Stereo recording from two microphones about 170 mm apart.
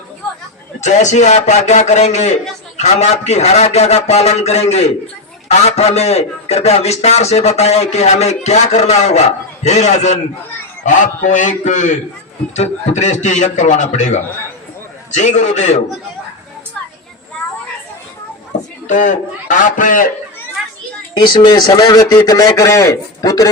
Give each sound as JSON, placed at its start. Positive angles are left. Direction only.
{"t": 0.8, "sound": "a man's voice", "side_deg": 45}
{"t": 18.9, "sound": "a man's voice", "side_deg": 50}
{"t": 21.2, "sound": "a man's voice", "side_deg": 25}